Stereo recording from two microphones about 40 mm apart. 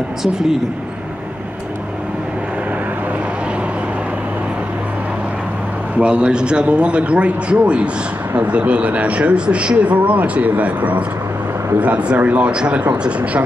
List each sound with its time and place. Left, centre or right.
0.2 s speech: centre
5.9 s speech: right